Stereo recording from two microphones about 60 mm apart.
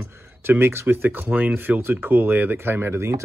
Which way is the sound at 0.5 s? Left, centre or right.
Right.